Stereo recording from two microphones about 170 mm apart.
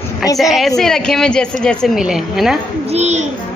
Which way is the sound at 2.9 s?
40° right (ahead or behind).